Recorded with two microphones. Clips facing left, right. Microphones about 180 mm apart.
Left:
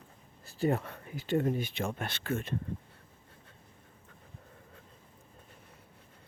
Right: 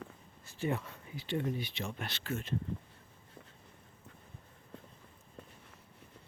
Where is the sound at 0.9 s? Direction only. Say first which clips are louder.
Left 6 dB; 60° left (ahead or behind).